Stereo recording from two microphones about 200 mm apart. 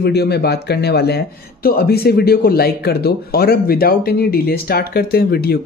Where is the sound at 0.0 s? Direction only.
55° left (ahead or behind).